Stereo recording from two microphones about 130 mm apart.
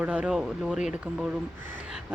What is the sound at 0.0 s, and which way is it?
Speech, 10° right (ahead or behind).